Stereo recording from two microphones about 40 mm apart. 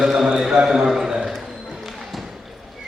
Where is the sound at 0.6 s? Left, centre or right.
Centre.